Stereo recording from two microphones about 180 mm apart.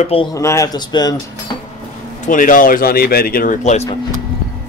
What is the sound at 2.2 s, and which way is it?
Speech, 45° left (ahead or behind).